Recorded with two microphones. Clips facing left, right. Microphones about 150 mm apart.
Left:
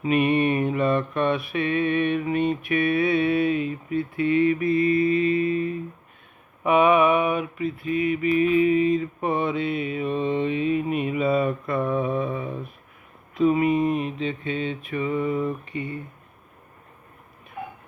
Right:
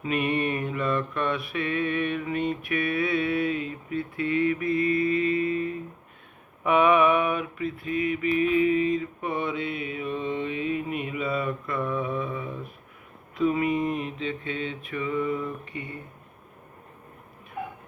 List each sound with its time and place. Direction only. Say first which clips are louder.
0.0 s mantra: left 6 dB; 20° left (ahead or behind)
9.0 s mantra: left 5 dB; 30° left (ahead or behind)